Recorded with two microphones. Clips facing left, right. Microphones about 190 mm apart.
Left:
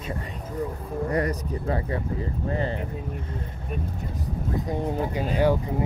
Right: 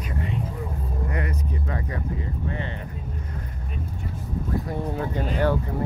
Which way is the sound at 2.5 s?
35° left (ahead or behind).